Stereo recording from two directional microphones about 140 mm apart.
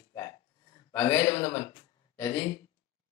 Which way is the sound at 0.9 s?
20° left (ahead or behind).